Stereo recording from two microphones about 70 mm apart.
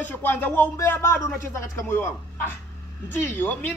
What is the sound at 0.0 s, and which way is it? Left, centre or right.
Speech, left.